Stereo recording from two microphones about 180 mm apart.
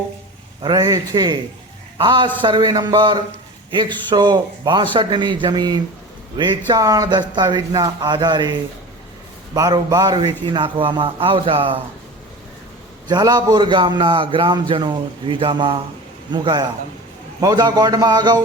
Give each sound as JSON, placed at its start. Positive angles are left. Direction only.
{"t": 0.6, "sound": "a man's voice", "side_deg": -20}
{"t": 9.6, "sound": "a man's voice", "side_deg": -20}
{"t": 13.1, "sound": "a man's voice", "side_deg": -25}